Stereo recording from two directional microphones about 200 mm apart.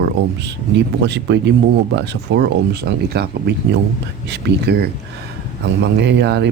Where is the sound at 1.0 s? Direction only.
60° right (ahead or behind).